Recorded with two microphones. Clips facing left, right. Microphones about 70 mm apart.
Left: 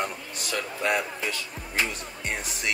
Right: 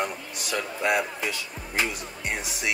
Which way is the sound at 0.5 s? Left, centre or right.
Centre.